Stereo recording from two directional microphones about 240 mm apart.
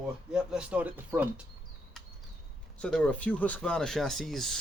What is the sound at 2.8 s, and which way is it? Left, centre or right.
Speech, centre.